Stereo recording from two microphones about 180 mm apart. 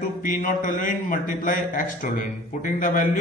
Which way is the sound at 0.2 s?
45° left (ahead or behind).